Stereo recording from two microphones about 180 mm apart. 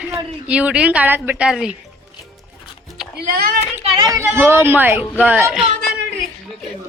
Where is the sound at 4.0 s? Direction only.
20° right (ahead or behind); by 5.7 s centre (ahead or behind).